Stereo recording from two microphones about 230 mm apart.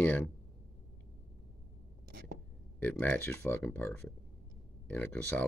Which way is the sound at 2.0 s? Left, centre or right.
Right.